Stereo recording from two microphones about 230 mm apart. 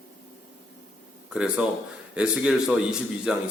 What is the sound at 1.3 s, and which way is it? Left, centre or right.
A man's voice, centre.